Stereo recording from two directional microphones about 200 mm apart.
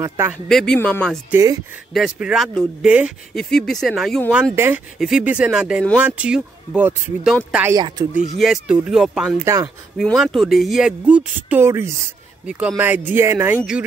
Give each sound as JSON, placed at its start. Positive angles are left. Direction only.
{"t": 0.0, "sound": "speech", "side_deg": -15}
{"t": 0.5, "sound": "speech", "side_deg": 0}
{"t": 1.3, "sound": "speech", "side_deg": -15}
{"t": 2.0, "sound": "speech", "side_deg": -5}